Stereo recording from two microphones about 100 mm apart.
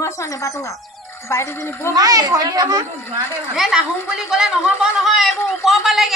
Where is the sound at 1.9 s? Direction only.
40° right (ahead or behind).